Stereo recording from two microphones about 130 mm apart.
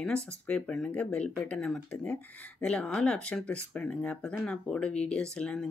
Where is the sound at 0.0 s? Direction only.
5° left (ahead or behind).